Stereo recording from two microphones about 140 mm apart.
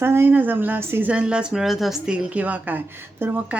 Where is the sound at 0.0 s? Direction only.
15° right (ahead or behind).